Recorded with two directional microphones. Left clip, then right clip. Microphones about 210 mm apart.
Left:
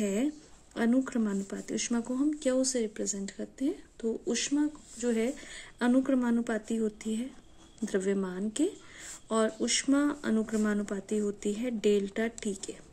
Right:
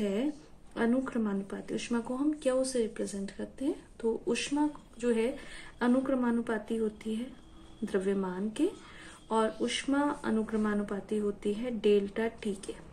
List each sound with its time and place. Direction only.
0.0 s speech: 50° left (ahead or behind)